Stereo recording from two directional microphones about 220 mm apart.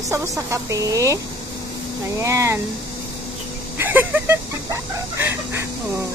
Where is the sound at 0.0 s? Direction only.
15° right (ahead or behind).